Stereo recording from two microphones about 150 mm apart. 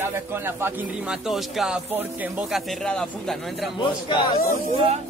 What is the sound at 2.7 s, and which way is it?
Speech, 5° left (ahead or behind).